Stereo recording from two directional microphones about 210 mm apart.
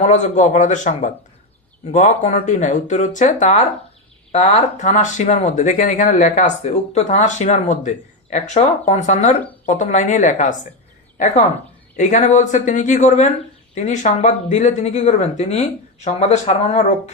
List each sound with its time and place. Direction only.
0.0 s speech: 35° left (ahead or behind)
11.9 s speech: 35° left (ahead or behind)